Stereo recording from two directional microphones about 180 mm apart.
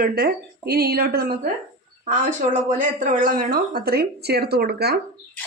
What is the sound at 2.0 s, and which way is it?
Speech, 45° right (ahead or behind).